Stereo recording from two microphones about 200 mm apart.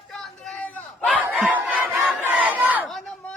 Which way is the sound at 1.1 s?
5° right (ahead or behind).